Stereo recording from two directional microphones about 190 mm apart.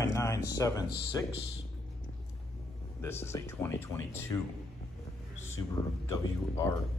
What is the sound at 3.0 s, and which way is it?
Speech, 10° left (ahead or behind).